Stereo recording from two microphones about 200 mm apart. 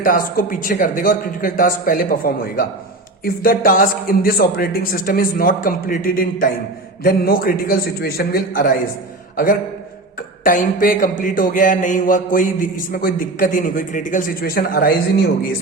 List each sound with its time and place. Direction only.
0.0 s a man's voice: 45° left (ahead or behind)
10.4 s a man's voice: 40° left (ahead or behind)